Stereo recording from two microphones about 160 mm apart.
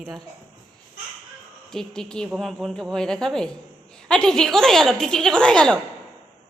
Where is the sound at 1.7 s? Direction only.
5° left (ahead or behind).